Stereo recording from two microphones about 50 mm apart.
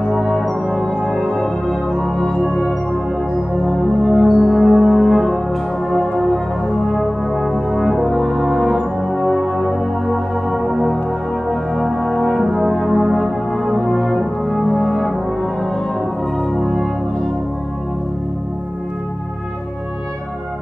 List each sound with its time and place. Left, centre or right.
0.1 s brass instrument: centre
0.7 s music: centre
4.0 s brass instrument: centre
8.5 s music: centre
11.4 s brass instrument: centre
16.5 s brass instrument: centre